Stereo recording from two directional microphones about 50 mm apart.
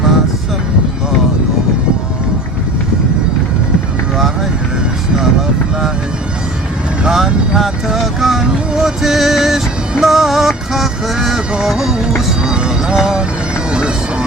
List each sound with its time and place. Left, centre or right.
7.0 s vehicle: centre
7.9 s music: centre
13.7 s bagpipes: centre